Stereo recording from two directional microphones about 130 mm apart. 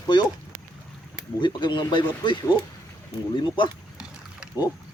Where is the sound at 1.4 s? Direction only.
35° left (ahead or behind).